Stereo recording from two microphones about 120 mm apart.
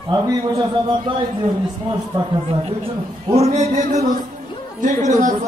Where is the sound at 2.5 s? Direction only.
50° right (ahead or behind); by 5.3 s 90° right.